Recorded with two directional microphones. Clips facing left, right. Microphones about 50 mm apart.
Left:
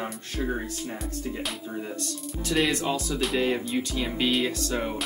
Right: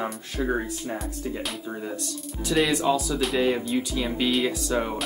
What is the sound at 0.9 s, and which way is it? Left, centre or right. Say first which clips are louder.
Speech: right 2 dB; centre.